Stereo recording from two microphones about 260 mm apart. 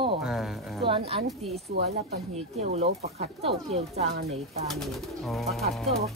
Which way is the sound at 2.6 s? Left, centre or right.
Right.